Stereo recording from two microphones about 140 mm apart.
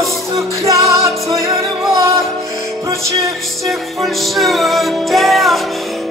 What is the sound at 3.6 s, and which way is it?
Music, centre (ahead or behind).